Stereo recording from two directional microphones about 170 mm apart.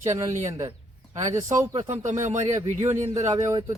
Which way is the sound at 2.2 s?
45° right (ahead or behind).